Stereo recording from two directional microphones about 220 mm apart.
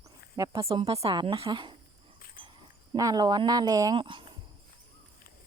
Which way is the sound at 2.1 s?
40° left (ahead or behind).